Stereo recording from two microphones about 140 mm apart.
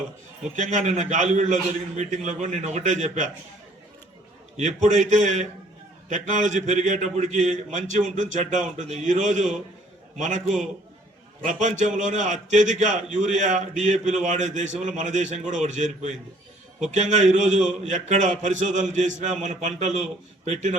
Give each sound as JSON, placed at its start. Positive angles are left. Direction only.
{"t": 0.5, "sound": "a man's voice", "side_deg": -60}
{"t": 4.5, "sound": "a man's voice", "side_deg": -60}
{"t": 11.4, "sound": "a man's voice", "side_deg": -60}
{"t": 16.9, "sound": "a man's voice", "side_deg": -60}